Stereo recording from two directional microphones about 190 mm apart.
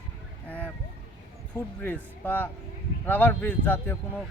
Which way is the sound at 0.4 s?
5° left (ahead or behind).